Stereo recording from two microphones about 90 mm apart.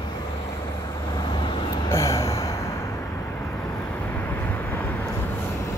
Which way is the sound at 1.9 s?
35° left (ahead or behind).